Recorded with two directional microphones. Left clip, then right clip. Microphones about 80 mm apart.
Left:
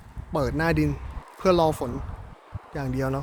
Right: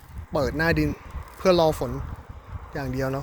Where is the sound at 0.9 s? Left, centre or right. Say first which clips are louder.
Even; left.